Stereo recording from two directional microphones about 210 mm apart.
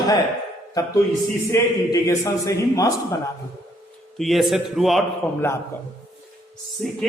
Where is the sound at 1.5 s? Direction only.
15° left (ahead or behind).